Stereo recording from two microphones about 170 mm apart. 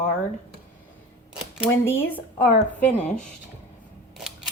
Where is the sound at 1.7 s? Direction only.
15° left (ahead or behind).